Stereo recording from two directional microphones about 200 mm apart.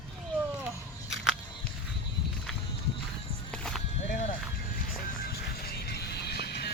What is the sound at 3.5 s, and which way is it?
Sheep, 5° left (ahead or behind).